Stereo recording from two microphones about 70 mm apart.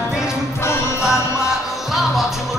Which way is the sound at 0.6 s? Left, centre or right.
Left.